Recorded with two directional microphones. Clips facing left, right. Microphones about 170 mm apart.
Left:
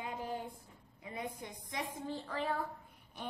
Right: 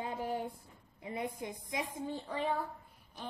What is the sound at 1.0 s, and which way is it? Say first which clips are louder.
Speech: right 4 dB; 25° right (ahead or behind).